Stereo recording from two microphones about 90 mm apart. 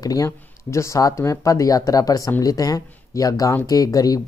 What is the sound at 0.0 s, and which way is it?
Speech, 40° left (ahead or behind).